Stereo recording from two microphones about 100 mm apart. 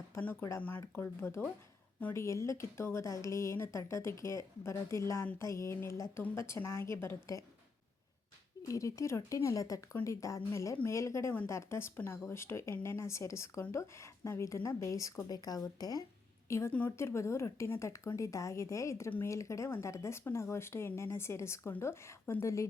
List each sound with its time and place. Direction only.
0.1 s a woman's voice: 20° left (ahead or behind)
8.6 s a woman's voice: 30° left (ahead or behind)